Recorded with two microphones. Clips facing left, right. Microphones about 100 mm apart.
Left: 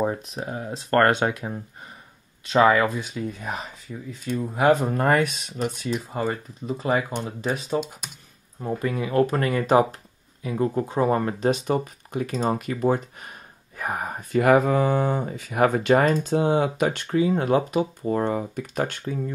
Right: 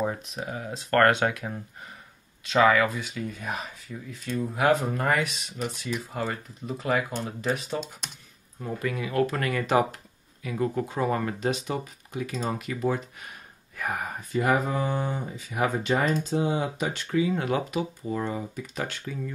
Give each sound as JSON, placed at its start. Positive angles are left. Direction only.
{"t": 0.3, "sound": "speech", "side_deg": 35}
{"t": 6.1, "sound": "speech", "side_deg": 25}
{"t": 14.3, "sound": "speech", "side_deg": 75}
{"t": 17.1, "sound": "speech", "side_deg": 35}
{"t": 18.0, "sound": "speech", "side_deg": 55}